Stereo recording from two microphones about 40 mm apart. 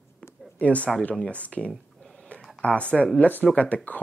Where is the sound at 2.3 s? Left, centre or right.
Left.